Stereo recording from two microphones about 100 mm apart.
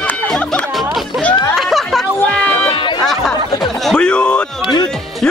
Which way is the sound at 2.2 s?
15° left (ahead or behind).